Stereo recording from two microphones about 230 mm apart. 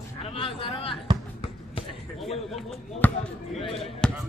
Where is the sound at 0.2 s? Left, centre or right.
Left.